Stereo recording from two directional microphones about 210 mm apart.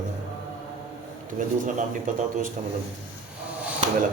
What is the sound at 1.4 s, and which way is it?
Speech, 40° right (ahead or behind).